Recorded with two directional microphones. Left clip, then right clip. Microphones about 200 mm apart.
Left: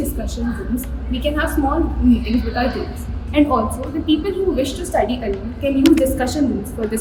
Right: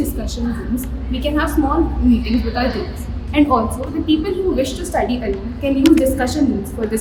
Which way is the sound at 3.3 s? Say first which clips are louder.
Right 1 dB; 5° right (ahead or behind).